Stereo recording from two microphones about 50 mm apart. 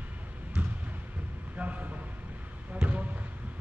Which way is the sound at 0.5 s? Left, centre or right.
Centre.